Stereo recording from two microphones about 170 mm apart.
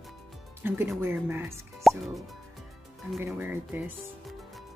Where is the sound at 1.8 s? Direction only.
Centre (ahead or behind).